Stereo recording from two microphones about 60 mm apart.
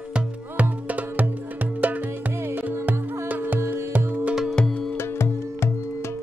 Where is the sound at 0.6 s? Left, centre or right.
Right.